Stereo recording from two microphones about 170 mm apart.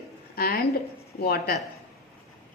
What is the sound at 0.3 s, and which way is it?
A woman's voice, 65° left (ahead or behind).